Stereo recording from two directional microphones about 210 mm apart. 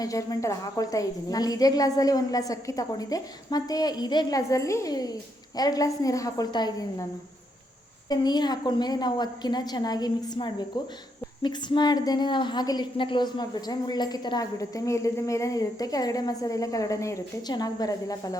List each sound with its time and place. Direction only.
0.0 s a woman's voice: 15° left (ahead or behind)
8.1 s a woman's voice: 20° left (ahead or behind)